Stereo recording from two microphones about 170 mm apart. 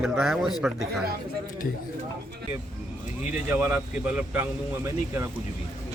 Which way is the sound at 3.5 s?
10° right (ahead or behind).